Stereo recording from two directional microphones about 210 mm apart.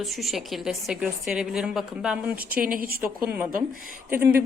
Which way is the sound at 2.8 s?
45° right (ahead or behind).